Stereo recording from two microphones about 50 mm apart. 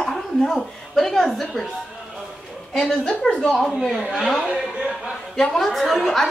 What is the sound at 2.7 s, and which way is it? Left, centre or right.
Speech, centre.